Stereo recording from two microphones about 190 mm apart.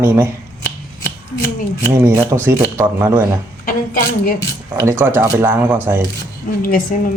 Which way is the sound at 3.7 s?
50° left (ahead or behind).